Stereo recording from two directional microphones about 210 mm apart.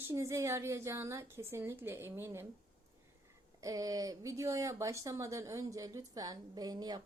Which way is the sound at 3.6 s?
15° right (ahead or behind).